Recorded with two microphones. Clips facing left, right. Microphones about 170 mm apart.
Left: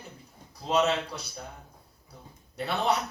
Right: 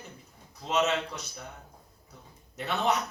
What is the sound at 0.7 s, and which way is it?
Speech, 35° left (ahead or behind).